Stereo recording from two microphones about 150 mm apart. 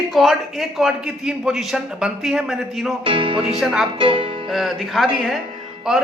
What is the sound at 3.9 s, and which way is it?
Music, 35° right (ahead or behind).